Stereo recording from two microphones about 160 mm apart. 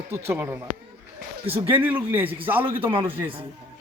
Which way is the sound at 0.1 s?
15° right (ahead or behind).